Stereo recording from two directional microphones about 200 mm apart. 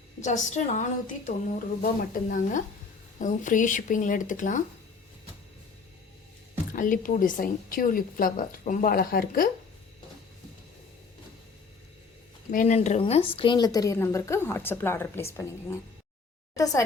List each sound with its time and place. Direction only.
0.2 s speech: 35° left (ahead or behind)
6.7 s a woman's voice: 40° left (ahead or behind)
12.5 s a woman's voice: 35° left (ahead or behind); by 15.4 s 10° left (ahead or behind)
16.6 s a woman's voice: 15° left (ahead or behind)